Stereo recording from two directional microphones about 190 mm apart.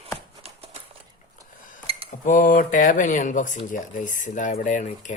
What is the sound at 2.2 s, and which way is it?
Speech, 45° left (ahead or behind).